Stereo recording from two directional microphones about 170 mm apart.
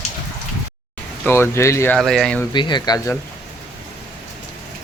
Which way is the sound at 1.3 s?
15° left (ahead or behind).